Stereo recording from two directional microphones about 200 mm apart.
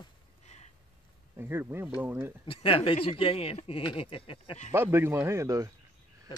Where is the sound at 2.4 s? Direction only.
25° left (ahead or behind).